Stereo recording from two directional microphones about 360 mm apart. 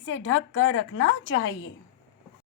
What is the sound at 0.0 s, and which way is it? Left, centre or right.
A woman's voice, left.